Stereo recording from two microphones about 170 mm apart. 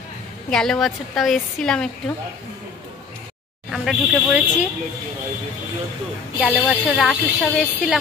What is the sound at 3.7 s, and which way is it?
A woman's voice, centre (ahead or behind).